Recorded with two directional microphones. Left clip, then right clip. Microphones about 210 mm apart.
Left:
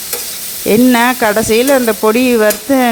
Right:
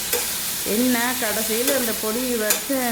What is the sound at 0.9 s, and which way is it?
Stir, 50° left (ahead or behind).